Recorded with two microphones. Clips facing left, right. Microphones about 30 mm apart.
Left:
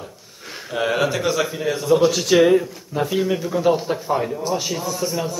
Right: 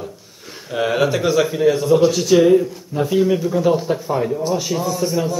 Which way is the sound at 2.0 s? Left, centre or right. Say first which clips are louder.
Right 2 dB; centre.